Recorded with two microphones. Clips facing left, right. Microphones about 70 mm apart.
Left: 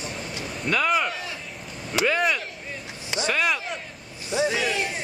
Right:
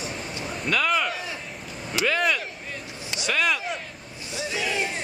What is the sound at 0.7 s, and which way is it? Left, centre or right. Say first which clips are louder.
Speech: left 1 dB; centre.